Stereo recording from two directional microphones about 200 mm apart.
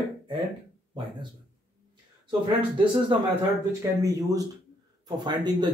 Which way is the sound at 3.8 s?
15° right (ahead or behind).